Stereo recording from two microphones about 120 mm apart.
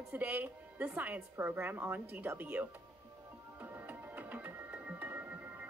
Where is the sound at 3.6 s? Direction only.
15° right (ahead or behind).